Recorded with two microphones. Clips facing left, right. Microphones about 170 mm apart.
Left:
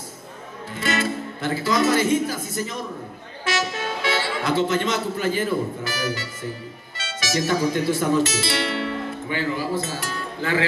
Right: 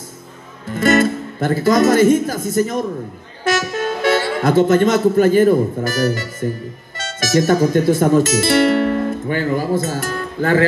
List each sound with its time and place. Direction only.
0.7 s speech: 45° right (ahead or behind)